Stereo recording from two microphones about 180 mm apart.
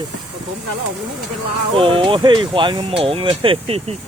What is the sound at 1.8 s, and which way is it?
Speech, 30° right (ahead or behind).